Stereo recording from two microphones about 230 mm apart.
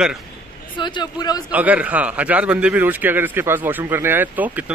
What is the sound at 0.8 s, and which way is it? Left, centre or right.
Speech, centre.